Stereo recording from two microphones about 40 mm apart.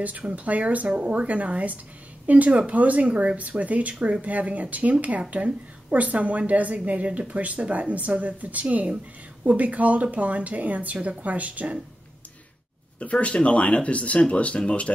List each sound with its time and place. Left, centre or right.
0.4 s speech: right
13.0 s speech: left